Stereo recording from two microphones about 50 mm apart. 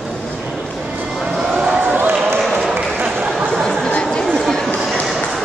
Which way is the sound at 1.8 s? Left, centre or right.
Right.